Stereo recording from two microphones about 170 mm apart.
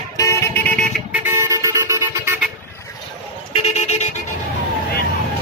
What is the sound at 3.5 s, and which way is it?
Vehicle, 40° left (ahead or behind).